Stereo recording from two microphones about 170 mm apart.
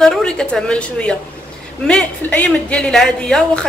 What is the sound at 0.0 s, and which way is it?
A woman's voice, 5° left (ahead or behind).